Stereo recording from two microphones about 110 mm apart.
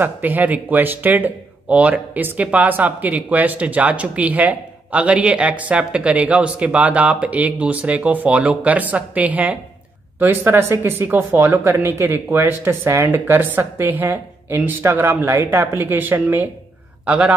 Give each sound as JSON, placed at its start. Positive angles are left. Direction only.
{"t": 0.0, "sound": "speech", "side_deg": -15}